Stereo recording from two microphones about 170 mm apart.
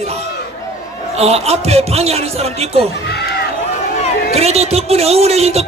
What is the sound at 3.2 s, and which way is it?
Run, 70° left (ahead or behind).